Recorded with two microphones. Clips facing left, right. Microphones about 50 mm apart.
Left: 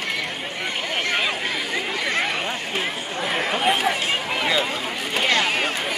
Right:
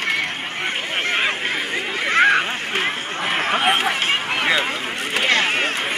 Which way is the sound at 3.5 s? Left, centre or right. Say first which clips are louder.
Right 2 dB; right.